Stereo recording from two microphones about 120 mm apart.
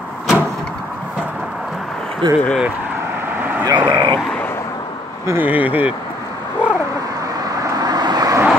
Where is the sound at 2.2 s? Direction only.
40° right (ahead or behind).